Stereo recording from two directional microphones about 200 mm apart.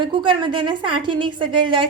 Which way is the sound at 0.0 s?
25° right (ahead or behind).